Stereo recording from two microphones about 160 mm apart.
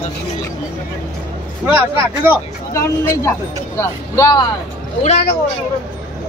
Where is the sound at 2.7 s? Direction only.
20° left (ahead or behind).